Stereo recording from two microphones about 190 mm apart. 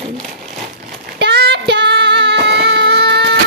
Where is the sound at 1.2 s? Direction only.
60° right (ahead or behind).